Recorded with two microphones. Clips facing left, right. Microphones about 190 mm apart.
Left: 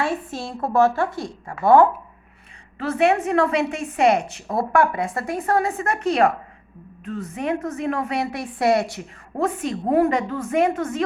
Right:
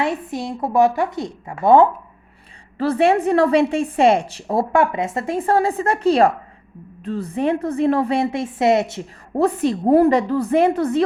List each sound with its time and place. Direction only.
0.0 s a woman's voice: 20° right (ahead or behind)
2.7 s a woman's voice: 35° right (ahead or behind)
9.4 s a woman's voice: 35° right (ahead or behind)